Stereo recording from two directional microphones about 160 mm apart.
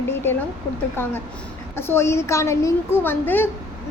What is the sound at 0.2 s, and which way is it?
Speech, 15° left (ahead or behind).